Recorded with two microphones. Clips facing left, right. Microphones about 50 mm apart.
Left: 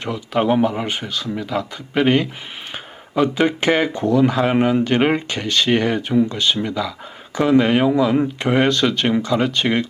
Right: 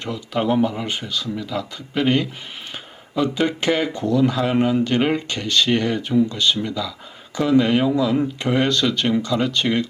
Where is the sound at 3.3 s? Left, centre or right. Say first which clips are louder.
Left 2 dB; left.